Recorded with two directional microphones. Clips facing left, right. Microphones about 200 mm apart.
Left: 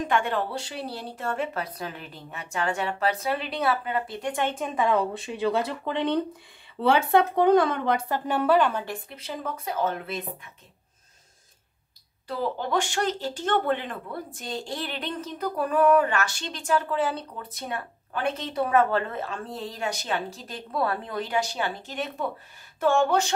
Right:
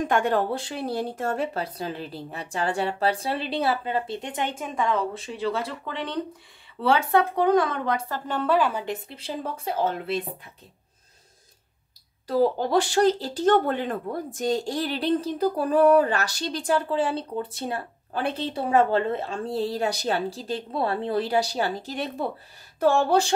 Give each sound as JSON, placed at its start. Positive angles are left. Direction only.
{"t": 0.1, "sound": "speech", "side_deg": -45}
{"t": 4.7, "sound": "speech", "side_deg": 10}
{"t": 8.3, "sound": "speech", "side_deg": 10}
{"t": 8.5, "sound": "a woman's voice", "side_deg": -5}
{"t": 8.8, "sound": "speech", "side_deg": -25}
{"t": 12.3, "sound": "speech", "side_deg": -40}